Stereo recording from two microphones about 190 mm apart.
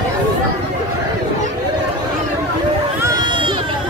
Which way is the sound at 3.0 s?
20° right (ahead or behind).